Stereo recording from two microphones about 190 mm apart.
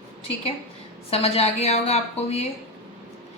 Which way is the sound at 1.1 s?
30° left (ahead or behind).